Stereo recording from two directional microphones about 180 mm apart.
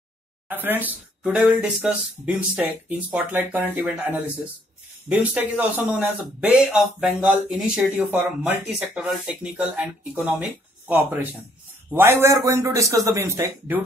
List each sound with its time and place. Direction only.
0.5 s a man's voice: 10° right (ahead or behind)